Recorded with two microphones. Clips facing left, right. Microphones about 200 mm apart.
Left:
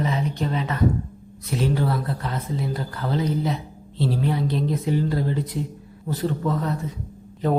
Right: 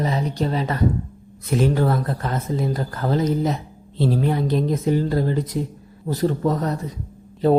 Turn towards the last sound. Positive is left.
turn(degrees=-35)  # may be behind; listen again after turning